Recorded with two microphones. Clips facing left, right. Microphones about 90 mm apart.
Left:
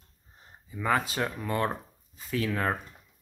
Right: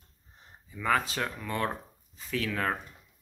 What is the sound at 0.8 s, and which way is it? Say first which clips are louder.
Speech: left 1 dB; 15° left (ahead or behind).